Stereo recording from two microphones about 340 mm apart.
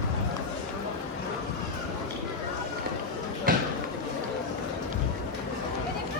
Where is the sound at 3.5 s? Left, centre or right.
Right.